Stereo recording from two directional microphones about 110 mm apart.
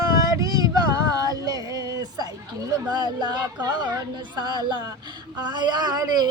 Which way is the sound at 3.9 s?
40° right (ahead or behind).